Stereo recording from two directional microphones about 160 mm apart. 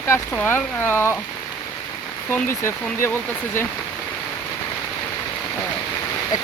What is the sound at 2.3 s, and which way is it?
Speech, 15° left (ahead or behind).